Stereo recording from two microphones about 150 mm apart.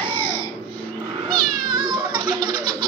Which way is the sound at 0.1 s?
35° right (ahead or behind).